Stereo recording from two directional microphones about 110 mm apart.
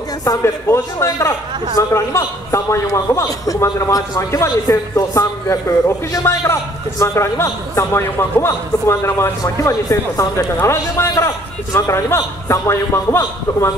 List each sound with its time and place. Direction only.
0.2 s a man's voice: 30° left (ahead or behind)